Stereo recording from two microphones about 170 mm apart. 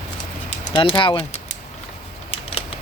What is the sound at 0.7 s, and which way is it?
Speech, 30° left (ahead or behind).